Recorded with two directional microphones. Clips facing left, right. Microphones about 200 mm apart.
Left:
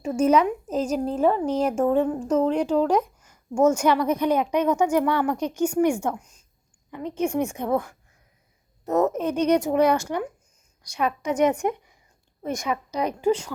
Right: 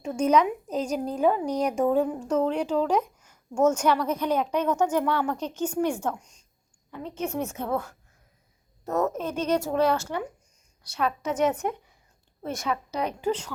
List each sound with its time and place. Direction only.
0.0 s a woman's voice: 5° left (ahead or behind)